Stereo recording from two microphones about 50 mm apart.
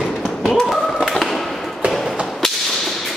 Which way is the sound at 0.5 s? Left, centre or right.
Centre.